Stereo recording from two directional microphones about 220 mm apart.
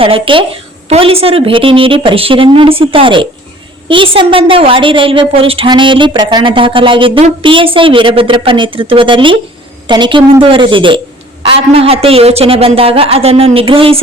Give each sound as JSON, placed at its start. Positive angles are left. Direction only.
{"t": 0.0, "sound": "a woman's voice", "side_deg": -25}